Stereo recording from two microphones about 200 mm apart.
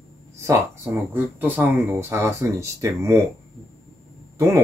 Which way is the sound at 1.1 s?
10° right (ahead or behind).